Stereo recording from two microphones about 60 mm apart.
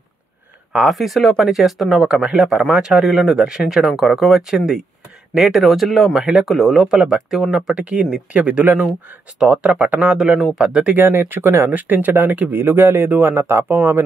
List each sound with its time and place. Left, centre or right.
0.8 s speech: centre
2.7 s speech: centre
11.0 s speech: right